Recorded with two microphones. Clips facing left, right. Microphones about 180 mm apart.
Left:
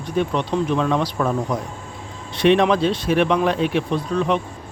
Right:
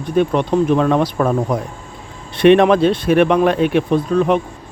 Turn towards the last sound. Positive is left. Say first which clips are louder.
# right 6 dB
turn(degrees=-50)  # may be behind; listen again after turning